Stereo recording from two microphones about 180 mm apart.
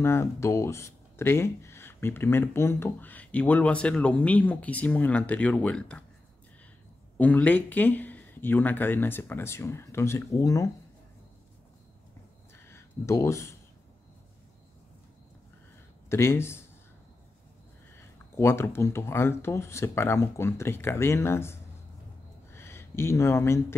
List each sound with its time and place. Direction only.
0.0 s speech: 15° left (ahead or behind)
7.2 s speech: 10° left (ahead or behind)
12.5 s a sound: 15° left (ahead or behind)
16.1 s speech: 15° left (ahead or behind)
18.3 s speech: 15° left (ahead or behind)